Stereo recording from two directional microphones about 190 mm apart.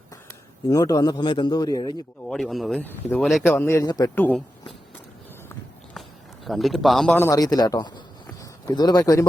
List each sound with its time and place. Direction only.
0.7 s a man's voice: 20° left (ahead or behind)
2.2 s speech: centre (ahead or behind)
6.4 s a man's voice: centre (ahead or behind); by 9.2 s 20° left (ahead or behind)